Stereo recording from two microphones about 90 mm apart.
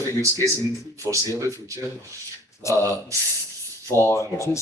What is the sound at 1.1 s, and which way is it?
Speech, 35° right (ahead or behind).